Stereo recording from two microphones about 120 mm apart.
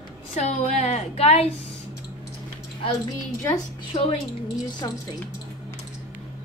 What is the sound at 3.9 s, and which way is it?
Speech, 55° left (ahead or behind).